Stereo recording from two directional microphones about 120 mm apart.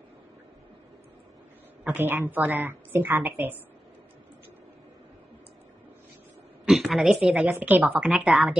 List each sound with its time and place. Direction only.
2.0 s a woman's voice: 15° right (ahead or behind)
6.6 s a woman's voice: centre (ahead or behind)
7.4 s a woman's voice: 15° right (ahead or behind)